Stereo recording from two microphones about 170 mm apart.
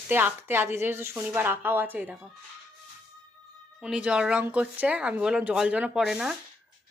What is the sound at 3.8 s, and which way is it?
Speech, 5° right (ahead or behind).